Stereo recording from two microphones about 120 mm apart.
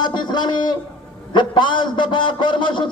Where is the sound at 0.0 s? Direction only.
40° left (ahead or behind).